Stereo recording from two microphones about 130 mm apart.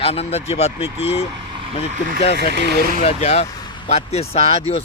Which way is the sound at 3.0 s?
60° left (ahead or behind).